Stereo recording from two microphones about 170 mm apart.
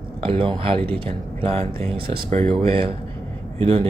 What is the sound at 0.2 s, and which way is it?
Speech, 30° right (ahead or behind).